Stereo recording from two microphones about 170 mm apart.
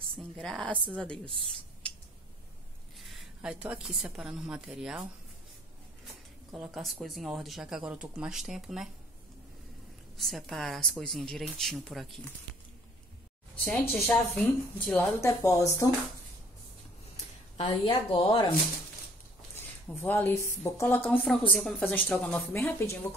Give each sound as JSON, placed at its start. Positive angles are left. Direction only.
{"t": 0.4, "sound": "speech", "side_deg": 0}
{"t": 3.0, "sound": "a woman's voice", "side_deg": 0}
{"t": 6.5, "sound": "speech", "side_deg": 0}
{"t": 10.1, "sound": "speech", "side_deg": 0}
{"t": 13.7, "sound": "a woman's voice", "side_deg": 10}
{"t": 17.6, "sound": "a woman's voice", "side_deg": 30}
{"t": 20.0, "sound": "a woman's voice", "side_deg": 10}